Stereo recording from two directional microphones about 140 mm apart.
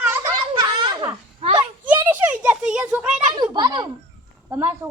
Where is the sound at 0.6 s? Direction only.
30° right (ahead or behind).